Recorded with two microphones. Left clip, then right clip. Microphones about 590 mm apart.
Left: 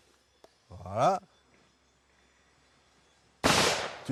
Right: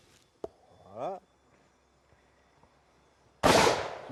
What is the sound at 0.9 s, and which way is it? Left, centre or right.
Speech, left.